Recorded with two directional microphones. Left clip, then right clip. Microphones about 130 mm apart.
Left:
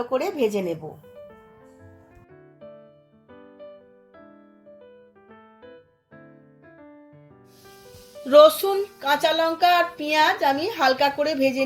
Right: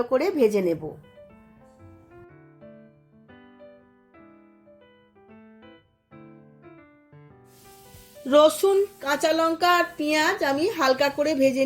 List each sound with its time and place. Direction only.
0.0 s a woman's voice: 55° right (ahead or behind)
8.2 s speech: 50° right (ahead or behind)